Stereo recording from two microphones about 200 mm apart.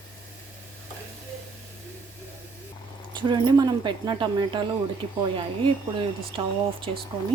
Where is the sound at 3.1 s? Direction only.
25° right (ahead or behind).